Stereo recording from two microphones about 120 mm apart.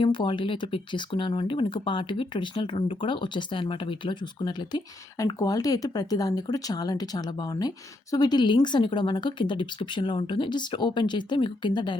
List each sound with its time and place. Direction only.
0.0 s speech: 45° left (ahead or behind)